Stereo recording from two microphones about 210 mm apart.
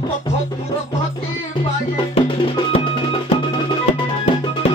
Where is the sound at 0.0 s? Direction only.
20° left (ahead or behind).